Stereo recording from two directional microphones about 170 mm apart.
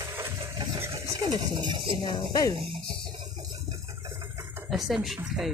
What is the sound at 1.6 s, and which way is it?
Speech, 30° right (ahead or behind).